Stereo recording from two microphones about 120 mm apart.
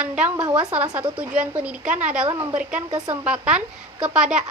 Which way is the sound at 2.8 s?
35° right (ahead or behind).